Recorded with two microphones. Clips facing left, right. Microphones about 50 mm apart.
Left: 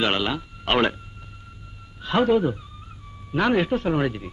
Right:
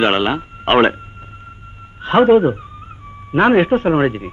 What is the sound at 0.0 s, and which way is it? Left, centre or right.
Speech, right.